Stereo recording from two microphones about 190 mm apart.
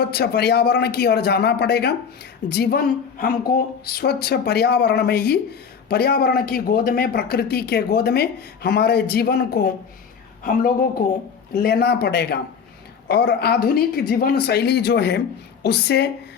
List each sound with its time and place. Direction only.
0.0 s a woman's voice: 60° left (ahead or behind)